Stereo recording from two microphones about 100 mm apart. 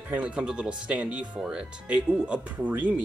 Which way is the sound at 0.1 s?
10° right (ahead or behind).